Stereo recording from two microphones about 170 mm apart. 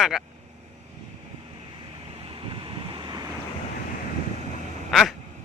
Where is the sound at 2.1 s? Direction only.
30° right (ahead or behind).